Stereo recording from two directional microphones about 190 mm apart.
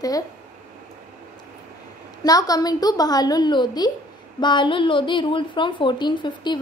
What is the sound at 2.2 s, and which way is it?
A woman's voice, 20° left (ahead or behind).